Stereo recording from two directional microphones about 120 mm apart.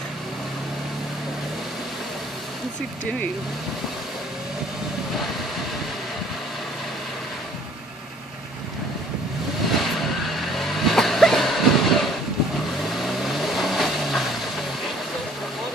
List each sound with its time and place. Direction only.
9.7 s vehicle: centre (ahead or behind)